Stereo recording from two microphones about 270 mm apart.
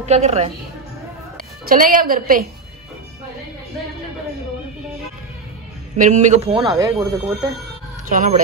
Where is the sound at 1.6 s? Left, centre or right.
Right.